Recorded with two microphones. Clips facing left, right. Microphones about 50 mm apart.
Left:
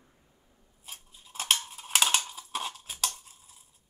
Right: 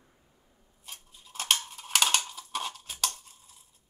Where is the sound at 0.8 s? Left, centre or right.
Centre.